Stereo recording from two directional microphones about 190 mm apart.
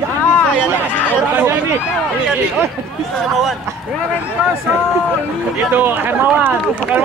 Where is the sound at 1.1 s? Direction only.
10° right (ahead or behind).